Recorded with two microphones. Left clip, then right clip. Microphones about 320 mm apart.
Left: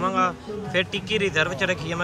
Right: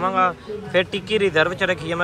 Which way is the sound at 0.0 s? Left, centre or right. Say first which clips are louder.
Right 3 dB; centre.